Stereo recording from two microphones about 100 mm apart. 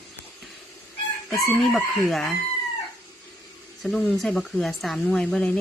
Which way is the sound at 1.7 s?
5° left (ahead or behind).